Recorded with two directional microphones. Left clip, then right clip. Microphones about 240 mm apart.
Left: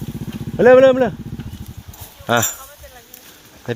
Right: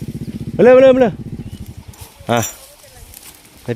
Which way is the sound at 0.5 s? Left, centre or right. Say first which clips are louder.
Right 2 dB; right.